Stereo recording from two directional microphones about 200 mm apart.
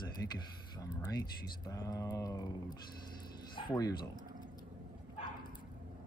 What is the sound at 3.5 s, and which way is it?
Speech, 20° left (ahead or behind).